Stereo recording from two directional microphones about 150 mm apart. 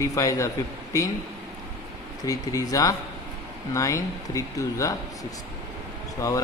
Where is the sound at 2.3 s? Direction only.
25° left (ahead or behind).